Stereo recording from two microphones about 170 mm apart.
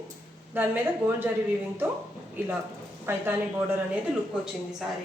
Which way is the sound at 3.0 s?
15° right (ahead or behind).